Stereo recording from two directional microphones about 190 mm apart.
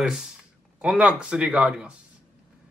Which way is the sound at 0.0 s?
5° right (ahead or behind).